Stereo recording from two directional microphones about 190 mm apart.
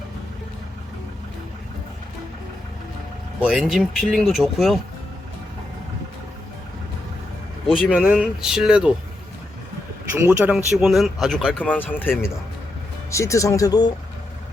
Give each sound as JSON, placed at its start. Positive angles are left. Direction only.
{"t": 3.4, "sound": "speech", "side_deg": 0}
{"t": 7.8, "sound": "speech", "side_deg": -5}
{"t": 10.2, "sound": "speech", "side_deg": -10}